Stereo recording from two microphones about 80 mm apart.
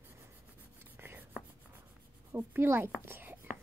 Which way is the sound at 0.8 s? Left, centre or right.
Right.